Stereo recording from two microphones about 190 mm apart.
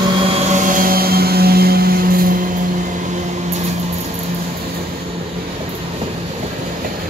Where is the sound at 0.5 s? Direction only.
45° right (ahead or behind).